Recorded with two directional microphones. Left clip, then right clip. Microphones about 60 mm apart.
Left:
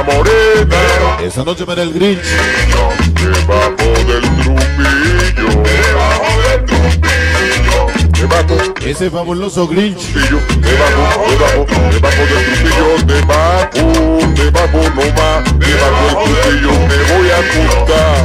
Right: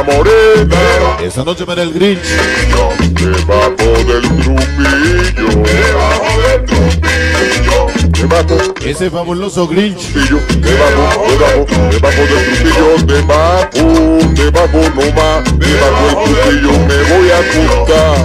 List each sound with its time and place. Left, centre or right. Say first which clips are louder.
0.1 s music: right 3 dB; left
1.8 s a man's voice: right 1 dB; centre
2.4 s music: right 2 dB; left
3.5 s music: right 3 dB; left
10.3 s music: right 2 dB; left